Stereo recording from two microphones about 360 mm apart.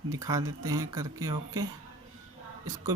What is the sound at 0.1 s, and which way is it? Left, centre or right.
Speech, centre.